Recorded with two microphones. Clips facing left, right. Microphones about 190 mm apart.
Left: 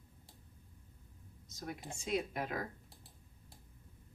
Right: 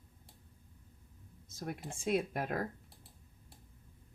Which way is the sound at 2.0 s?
55° right (ahead or behind).